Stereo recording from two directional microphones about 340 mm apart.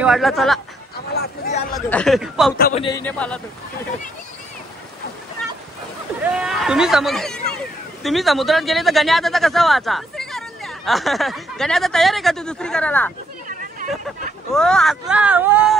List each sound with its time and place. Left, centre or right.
0.0 s speech: centre
1.1 s speech: centre
1.7 s speech: centre
2.5 s speech: left; by 3.3 s centre
6.2 s speech: centre
13.5 s a sound: right
14.5 s speech: centre